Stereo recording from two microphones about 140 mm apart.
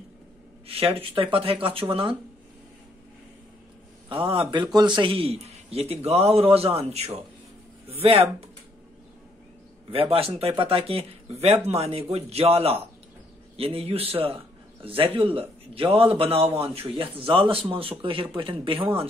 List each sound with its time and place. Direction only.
0.7 s a man's voice: 45° right (ahead or behind)
4.1 s a man's voice: 40° right (ahead or behind)
9.8 s a man's voice: 45° right (ahead or behind)